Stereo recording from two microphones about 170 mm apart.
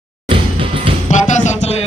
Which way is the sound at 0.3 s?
30° right (ahead or behind).